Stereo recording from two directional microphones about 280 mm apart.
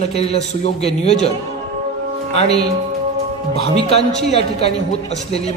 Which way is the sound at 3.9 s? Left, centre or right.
Left.